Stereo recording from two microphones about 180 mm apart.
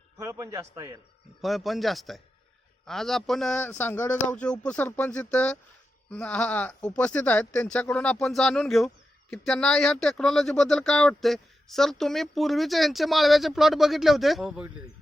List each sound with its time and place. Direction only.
0.2 s a man's voice: 15° right (ahead or behind)
1.4 s speech: centre (ahead or behind)